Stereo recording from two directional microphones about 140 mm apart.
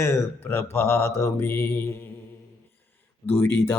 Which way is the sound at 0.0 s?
15° left (ahead or behind).